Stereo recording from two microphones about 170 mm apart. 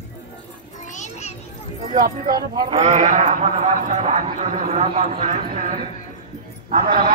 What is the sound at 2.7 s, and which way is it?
A man's voice, 45° right (ahead or behind).